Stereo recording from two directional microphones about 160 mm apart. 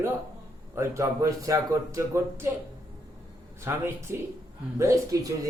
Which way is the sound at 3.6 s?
15° right (ahead or behind).